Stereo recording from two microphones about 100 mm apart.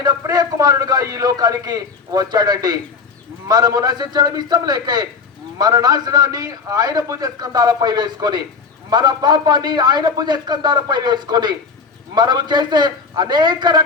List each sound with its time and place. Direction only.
0.0 s a man's voice: 40° right (ahead or behind)